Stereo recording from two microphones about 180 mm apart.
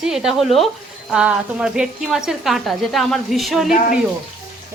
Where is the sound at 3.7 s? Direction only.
50° left (ahead or behind).